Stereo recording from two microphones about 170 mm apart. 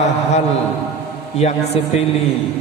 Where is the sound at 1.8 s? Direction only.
35° left (ahead or behind).